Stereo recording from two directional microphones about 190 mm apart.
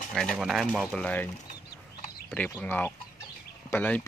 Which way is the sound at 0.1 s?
Centre (ahead or behind).